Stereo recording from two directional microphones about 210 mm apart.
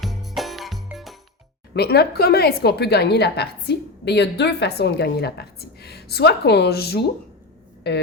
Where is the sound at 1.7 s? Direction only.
50° left (ahead or behind).